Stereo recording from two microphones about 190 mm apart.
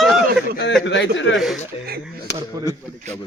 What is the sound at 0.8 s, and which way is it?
Speech, 70° left (ahead or behind).